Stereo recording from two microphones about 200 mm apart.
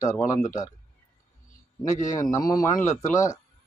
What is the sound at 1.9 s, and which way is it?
Speech, 35° left (ahead or behind).